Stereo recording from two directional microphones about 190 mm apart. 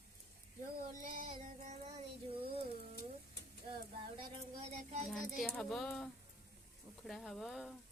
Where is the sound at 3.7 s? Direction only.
25° right (ahead or behind).